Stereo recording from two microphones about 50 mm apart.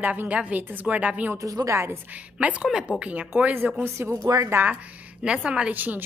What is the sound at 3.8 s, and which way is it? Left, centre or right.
Speech, right.